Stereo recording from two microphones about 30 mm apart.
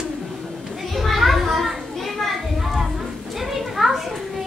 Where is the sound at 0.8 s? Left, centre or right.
Centre.